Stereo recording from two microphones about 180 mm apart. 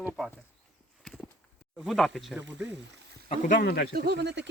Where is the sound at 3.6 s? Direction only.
60° left (ahead or behind).